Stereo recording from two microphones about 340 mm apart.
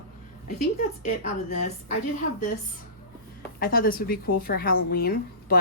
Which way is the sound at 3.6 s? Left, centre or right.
Left.